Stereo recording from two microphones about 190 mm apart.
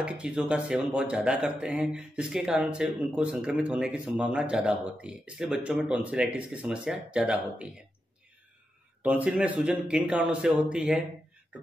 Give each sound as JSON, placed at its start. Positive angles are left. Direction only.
{"t": 0.0, "sound": "speech", "side_deg": -5}
{"t": 9.0, "sound": "speech", "side_deg": -5}